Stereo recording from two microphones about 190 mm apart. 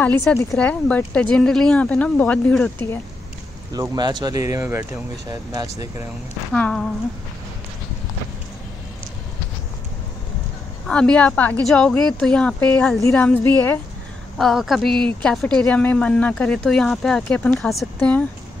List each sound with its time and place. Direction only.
0.0 s a woman's voice: 10° left (ahead or behind)
3.7 s speech: 20° right (ahead or behind)
6.5 s a woman's voice: 5° left (ahead or behind)
10.9 s a woman's voice: 5° left (ahead or behind)
14.4 s a woman's voice: centre (ahead or behind)